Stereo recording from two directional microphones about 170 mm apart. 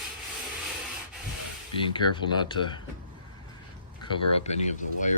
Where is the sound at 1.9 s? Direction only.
25° left (ahead or behind).